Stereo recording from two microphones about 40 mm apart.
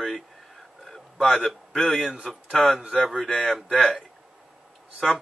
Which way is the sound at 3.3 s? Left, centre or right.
Left.